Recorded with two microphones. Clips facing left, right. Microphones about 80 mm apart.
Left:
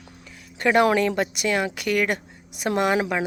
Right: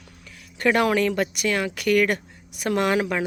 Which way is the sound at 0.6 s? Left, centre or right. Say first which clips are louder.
Left 1 dB; left.